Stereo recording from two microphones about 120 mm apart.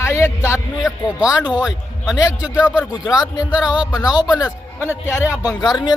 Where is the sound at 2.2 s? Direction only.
25° left (ahead or behind).